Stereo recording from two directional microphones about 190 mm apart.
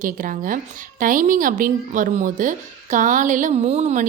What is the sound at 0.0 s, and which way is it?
A woman's voice, 45° right (ahead or behind).